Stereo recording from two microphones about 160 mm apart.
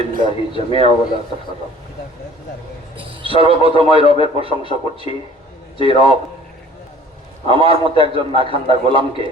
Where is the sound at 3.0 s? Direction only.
35° right (ahead or behind).